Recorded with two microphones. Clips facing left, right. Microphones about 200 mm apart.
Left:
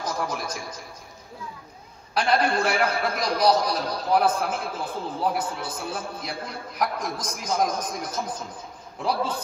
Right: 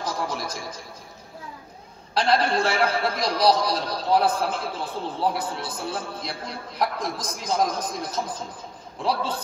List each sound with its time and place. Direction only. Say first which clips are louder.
0.0 s a man's voice: even; 30° right (ahead or behind)
2.1 s a man's voice: right 1 dB; 30° right (ahead or behind)